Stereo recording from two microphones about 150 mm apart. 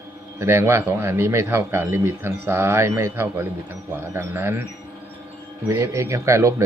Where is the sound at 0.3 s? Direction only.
15° right (ahead or behind).